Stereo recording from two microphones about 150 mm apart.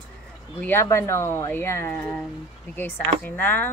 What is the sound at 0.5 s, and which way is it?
Speech, 15° left (ahead or behind).